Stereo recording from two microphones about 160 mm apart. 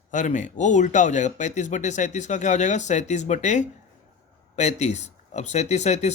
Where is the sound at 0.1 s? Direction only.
50° left (ahead or behind).